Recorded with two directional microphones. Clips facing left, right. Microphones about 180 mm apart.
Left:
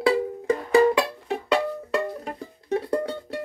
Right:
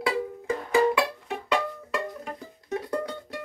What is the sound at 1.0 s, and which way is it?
Music, 35° left (ahead or behind).